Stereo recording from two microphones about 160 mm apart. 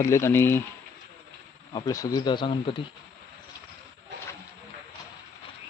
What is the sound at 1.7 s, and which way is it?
Speech, 20° left (ahead or behind).